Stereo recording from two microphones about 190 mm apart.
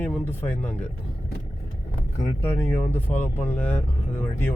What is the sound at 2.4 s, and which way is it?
Speech, 10° left (ahead or behind).